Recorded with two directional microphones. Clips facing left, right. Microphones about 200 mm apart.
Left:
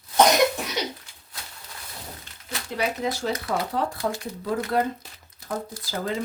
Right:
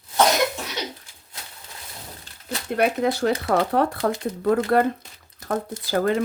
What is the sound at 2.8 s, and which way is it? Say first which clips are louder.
A woman's voice: right 6 dB; 55° right (ahead or behind).